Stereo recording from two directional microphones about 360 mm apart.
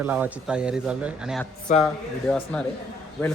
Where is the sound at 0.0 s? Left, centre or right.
Centre.